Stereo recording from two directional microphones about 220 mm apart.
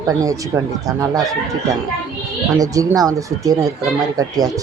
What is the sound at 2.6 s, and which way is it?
Speech, 15° right (ahead or behind).